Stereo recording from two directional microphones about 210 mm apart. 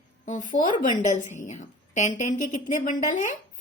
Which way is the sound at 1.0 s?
35° left (ahead or behind).